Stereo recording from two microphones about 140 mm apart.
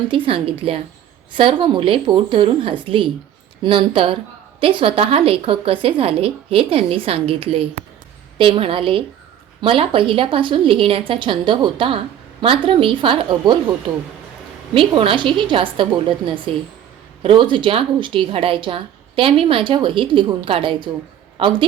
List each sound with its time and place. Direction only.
0.3 s a woman's voice: 40° right (ahead or behind)
14.7 s a woman's voice: 40° right (ahead or behind)